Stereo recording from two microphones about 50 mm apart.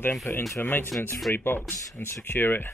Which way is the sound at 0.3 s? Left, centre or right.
Left.